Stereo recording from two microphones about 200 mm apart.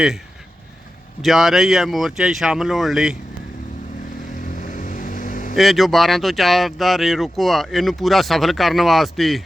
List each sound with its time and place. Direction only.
1.2 s speech: centre (ahead or behind)
4.5 s vehicle: 40° left (ahead or behind)
5.5 s speech: centre (ahead or behind)